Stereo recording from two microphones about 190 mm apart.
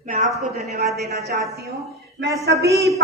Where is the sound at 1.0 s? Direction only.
55° right (ahead or behind).